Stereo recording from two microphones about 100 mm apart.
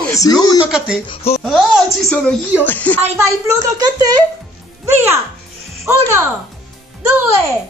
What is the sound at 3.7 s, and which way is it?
Speech, 45° right (ahead or behind).